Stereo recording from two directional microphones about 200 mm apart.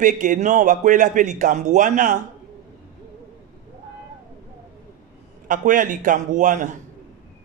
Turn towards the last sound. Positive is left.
turn(degrees=-40)  # may be behind; listen again after turning